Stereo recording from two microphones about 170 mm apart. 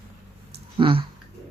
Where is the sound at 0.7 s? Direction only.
30° right (ahead or behind).